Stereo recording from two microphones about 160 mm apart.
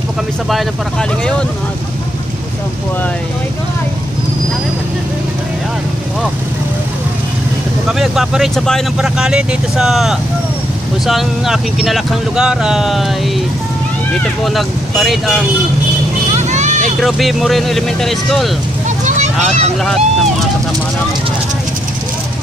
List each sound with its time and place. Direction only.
8.0 s speech: 5° right (ahead or behind)
14.4 s speech: centre (ahead or behind)
16.3 s vehicle: 50° right (ahead or behind)
17.0 s speech: centre (ahead or behind)